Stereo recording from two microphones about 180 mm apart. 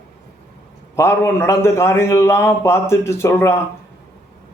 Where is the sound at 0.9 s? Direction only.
15° left (ahead or behind).